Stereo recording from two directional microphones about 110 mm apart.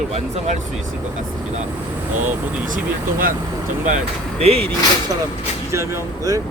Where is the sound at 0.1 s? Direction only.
90° right.